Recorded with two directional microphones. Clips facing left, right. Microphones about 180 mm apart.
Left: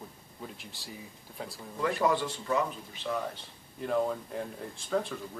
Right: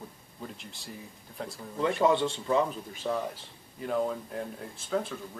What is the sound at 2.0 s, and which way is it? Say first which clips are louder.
Speech: right 5 dB; 25° right (ahead or behind).